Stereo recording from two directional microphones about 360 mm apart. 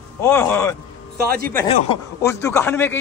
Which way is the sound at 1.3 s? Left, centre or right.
Right.